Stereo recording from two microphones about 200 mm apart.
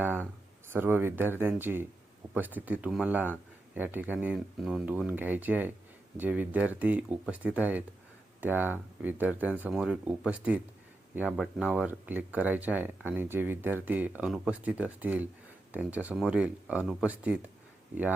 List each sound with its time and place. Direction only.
0.7 s speech: 10° right (ahead or behind)